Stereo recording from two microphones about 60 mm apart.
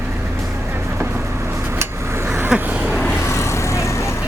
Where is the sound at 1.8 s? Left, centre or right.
Right.